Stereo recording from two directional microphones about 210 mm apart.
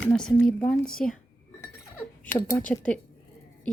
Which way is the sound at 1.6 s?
10° left (ahead or behind).